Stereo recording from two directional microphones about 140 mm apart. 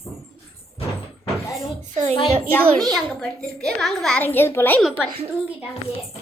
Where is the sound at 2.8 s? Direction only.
5° left (ahead or behind).